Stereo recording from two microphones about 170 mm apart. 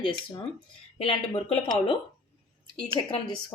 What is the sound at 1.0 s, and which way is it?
A woman's voice, 30° left (ahead or behind).